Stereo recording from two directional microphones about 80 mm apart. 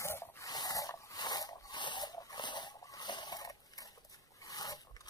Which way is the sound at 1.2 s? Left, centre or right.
Left.